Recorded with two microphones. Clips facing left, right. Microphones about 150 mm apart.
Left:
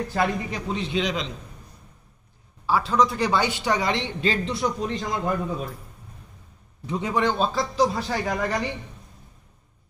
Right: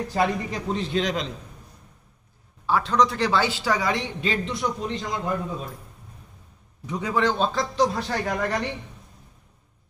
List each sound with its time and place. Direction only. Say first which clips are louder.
0.2 s speech: right 2 dB; centre (ahead or behind)
2.6 s speech: even; 5° left (ahead or behind); by 4.0 s 20° left (ahead or behind)
4.0 s speech: left 2 dB; centre (ahead or behind)
6.9 s a man's voice: even; 20° left (ahead or behind)
7.3 s speech: even; centre (ahead or behind)